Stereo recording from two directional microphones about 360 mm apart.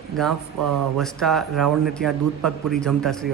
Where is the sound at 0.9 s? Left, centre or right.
Centre.